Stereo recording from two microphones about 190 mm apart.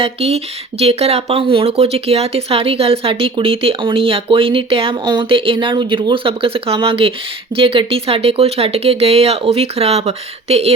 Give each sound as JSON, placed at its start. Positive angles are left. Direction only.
{"t": 0.0, "sound": "speech", "side_deg": -30}